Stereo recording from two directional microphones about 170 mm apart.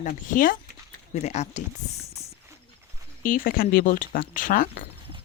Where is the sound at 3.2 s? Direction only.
55° left (ahead or behind).